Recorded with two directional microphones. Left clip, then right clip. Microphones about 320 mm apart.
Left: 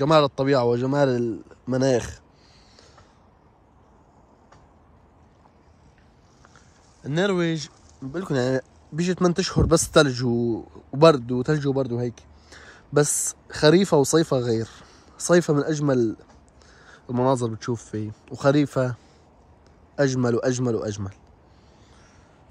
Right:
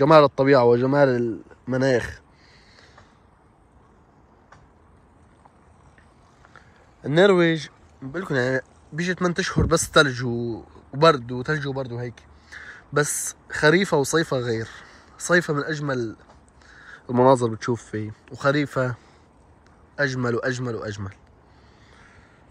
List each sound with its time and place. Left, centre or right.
0.0 s speech: centre
6.5 s speech: centre
20.0 s a man's voice: centre